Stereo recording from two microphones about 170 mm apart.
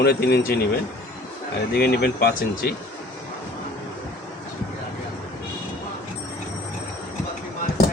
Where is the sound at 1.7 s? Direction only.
70° left (ahead or behind).